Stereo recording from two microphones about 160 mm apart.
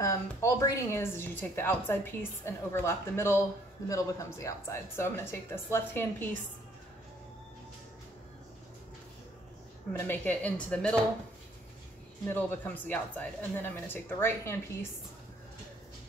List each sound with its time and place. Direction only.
0.0 s a woman's voice: 20° left (ahead or behind)
9.9 s a woman's voice: 10° left (ahead or behind)
12.3 s a woman's voice: 10° left (ahead or behind)